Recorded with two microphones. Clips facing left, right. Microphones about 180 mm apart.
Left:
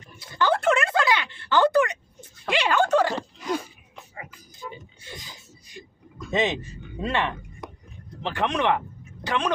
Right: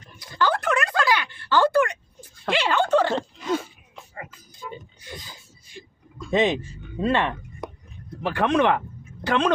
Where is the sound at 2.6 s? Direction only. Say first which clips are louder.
Even; 10° left (ahead or behind).